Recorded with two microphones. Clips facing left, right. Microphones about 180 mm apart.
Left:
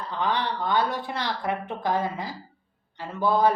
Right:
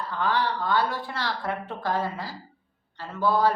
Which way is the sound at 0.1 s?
20° left (ahead or behind).